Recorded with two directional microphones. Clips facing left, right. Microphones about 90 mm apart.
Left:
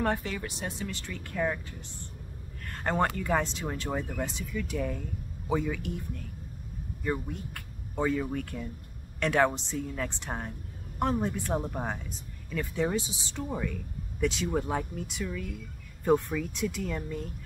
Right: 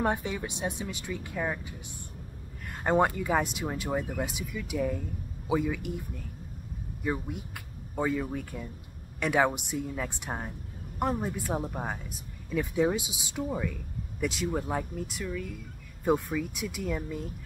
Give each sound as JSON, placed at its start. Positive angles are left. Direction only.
{"t": 0.0, "sound": "speech", "side_deg": -15}
{"t": 2.7, "sound": "a sound", "side_deg": -10}
{"t": 3.2, "sound": "speech", "side_deg": -10}